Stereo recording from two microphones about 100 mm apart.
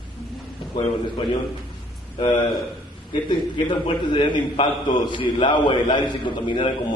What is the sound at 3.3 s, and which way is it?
A man's voice, 60° left (ahead or behind).